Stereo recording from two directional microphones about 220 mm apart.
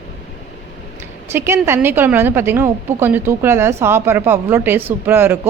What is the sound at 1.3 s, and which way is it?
A woman's voice, 10° right (ahead or behind).